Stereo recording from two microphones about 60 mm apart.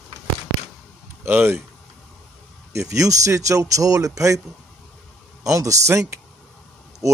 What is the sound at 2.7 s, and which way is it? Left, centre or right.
Speech, right.